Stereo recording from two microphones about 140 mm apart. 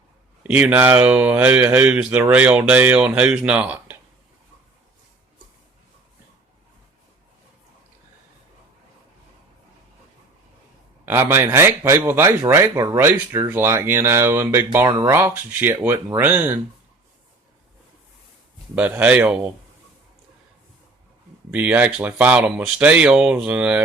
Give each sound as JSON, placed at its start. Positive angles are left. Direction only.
{"t": 0.4, "sound": "a man's voice", "side_deg": -10}
{"t": 11.0, "sound": "a man's voice", "side_deg": -15}
{"t": 14.8, "sound": "speech", "side_deg": -30}
{"t": 15.1, "sound": "a man's voice", "side_deg": -15}
{"t": 18.8, "sound": "a man's voice", "side_deg": -10}
{"t": 21.5, "sound": "a man's voice", "side_deg": -10}